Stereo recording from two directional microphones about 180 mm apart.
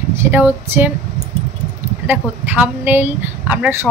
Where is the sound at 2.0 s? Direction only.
10° right (ahead or behind).